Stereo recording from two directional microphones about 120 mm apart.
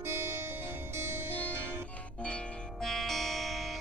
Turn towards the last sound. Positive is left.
turn(degrees=0)  # may be behind; listen again after turning